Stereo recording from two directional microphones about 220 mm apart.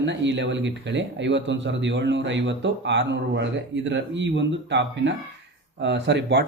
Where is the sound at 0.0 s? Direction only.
55° right (ahead or behind).